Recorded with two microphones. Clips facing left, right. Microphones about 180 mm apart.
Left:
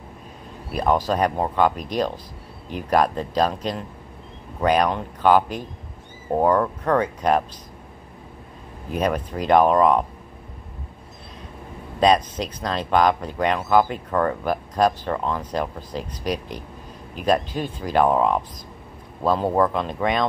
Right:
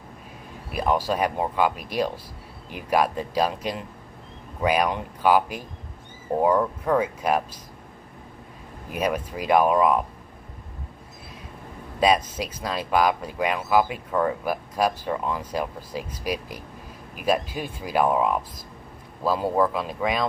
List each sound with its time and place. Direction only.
0.7 s speech: 10° right (ahead or behind)
8.9 s speech: 10° right (ahead or behind)
12.0 s speech: 10° right (ahead or behind)
19.5 s speech: 5° right (ahead or behind)